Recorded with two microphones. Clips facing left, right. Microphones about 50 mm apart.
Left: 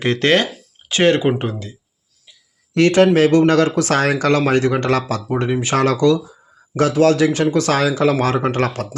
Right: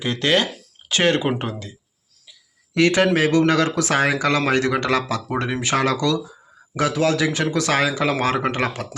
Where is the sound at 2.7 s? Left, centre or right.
Left.